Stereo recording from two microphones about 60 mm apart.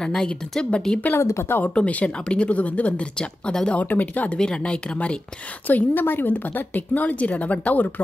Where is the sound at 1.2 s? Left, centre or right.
Left.